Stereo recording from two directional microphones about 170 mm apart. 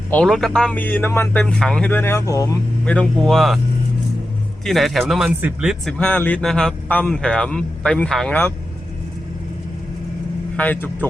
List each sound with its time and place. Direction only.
0.1 s speech: 5° left (ahead or behind)
2.8 s speech: 5° left (ahead or behind)
4.6 s speech: centre (ahead or behind)
6.0 s speech: 10° left (ahead or behind)
10.6 s speech: 10° left (ahead or behind)